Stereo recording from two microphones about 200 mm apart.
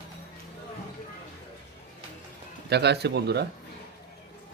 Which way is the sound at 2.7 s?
55° right (ahead or behind).